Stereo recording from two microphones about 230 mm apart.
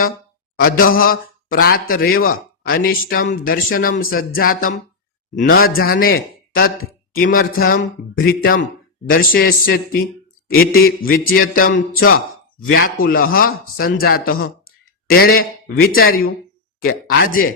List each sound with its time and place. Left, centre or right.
0.6 s a man's voice: left
12.5 s speech: left
12.8 s a man's voice: left